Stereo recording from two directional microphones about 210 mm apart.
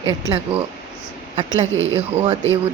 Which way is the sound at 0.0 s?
15° right (ahead or behind).